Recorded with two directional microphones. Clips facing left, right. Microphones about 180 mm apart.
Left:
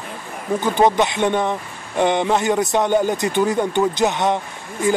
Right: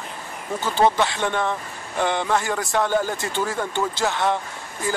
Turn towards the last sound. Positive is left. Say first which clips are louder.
# left 7 dB
turn(degrees=20)  # may be behind; listen again after turning